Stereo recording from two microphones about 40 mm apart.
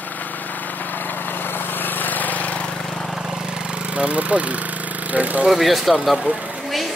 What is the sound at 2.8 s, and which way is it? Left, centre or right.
Vehicle, centre.